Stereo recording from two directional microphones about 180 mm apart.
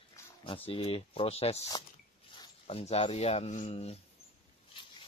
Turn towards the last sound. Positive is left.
turn(degrees=30)  # may be behind; listen again after turning